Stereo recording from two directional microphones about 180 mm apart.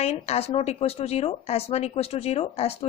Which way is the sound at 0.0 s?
35° left (ahead or behind).